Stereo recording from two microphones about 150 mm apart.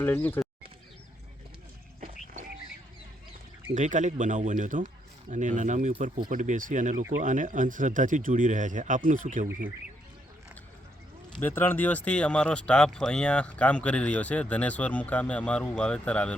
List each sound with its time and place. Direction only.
0.0 s speech: 15° left (ahead or behind)
3.8 s a man's voice: 55° right (ahead or behind)
11.3 s speech: 15° left (ahead or behind)